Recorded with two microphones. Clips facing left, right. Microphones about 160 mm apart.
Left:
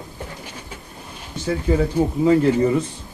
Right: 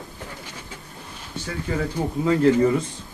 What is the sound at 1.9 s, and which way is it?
Speech, 15° left (ahead or behind).